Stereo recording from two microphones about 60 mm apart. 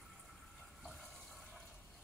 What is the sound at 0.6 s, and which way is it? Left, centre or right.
Water, centre.